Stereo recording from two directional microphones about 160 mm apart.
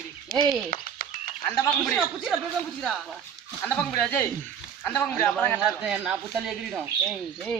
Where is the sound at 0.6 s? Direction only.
60° left (ahead or behind).